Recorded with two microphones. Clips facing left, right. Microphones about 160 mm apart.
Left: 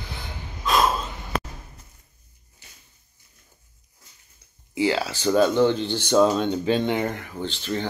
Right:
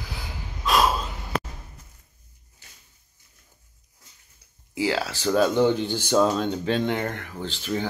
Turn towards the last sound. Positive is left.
turn(degrees=-5)  # may be behind; listen again after turning